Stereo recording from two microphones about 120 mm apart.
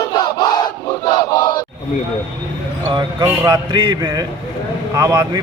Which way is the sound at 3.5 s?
45° right (ahead or behind).